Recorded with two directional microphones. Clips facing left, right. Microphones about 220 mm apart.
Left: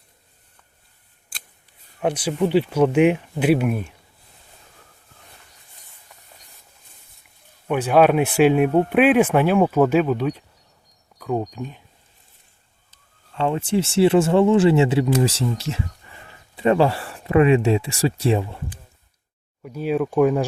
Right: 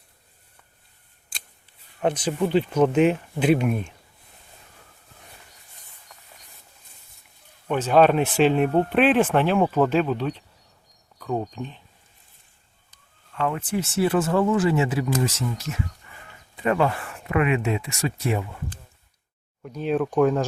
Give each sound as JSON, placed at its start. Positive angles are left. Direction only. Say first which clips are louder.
{"t": 2.0, "sound": "speech", "louder": "left 2 dB", "side_deg": 10}
{"t": 7.7, "sound": "speech", "louder": "left 2 dB", "side_deg": 10}
{"t": 13.3, "sound": "speech", "louder": "left 5 dB", "side_deg": 25}
{"t": 19.6, "sound": "speech", "louder": "left 2 dB", "side_deg": 5}